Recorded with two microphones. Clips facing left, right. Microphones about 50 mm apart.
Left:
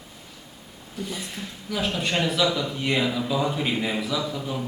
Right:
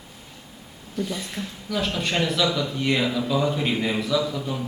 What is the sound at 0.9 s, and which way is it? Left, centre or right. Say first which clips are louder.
Speech: right 4 dB; centre.